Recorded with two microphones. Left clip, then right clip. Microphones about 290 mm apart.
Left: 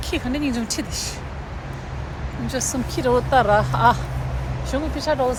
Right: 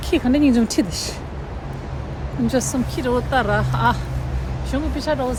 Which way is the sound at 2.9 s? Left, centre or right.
Centre.